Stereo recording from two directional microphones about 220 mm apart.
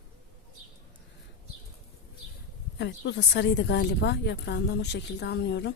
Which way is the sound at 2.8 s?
50° left (ahead or behind).